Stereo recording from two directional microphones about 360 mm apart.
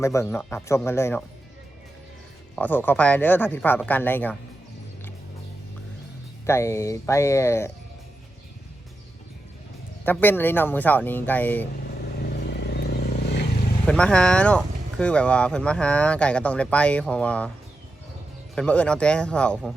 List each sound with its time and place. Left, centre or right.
0.0 s speech: centre
2.6 s speech: centre
6.4 s speech: centre
10.1 s speech: centre
12.2 s vehicle: left
13.8 s speech: centre
18.5 s speech: centre